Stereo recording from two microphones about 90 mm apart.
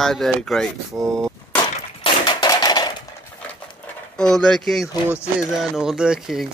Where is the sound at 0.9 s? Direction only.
15° right (ahead or behind).